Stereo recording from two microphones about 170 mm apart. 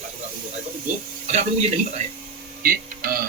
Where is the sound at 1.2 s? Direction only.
40° right (ahead or behind).